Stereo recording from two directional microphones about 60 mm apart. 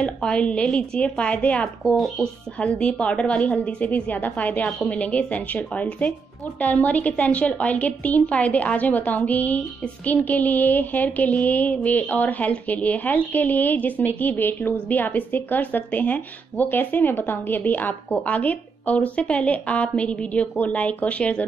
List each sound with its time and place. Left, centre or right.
0.0 s speech: centre